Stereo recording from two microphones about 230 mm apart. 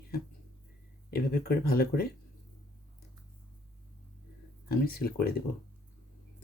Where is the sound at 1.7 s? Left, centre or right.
Left.